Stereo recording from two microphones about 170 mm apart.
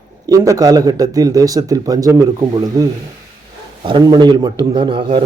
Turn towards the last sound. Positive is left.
turn(degrees=-30)  # may be behind; listen again after turning